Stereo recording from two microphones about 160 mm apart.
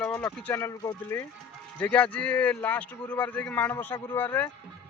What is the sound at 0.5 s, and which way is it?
Speech, 15° left (ahead or behind).